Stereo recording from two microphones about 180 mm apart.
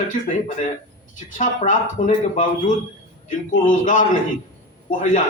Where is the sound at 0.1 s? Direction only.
45° left (ahead or behind).